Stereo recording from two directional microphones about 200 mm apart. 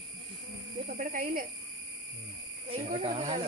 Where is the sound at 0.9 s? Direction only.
45° right (ahead or behind).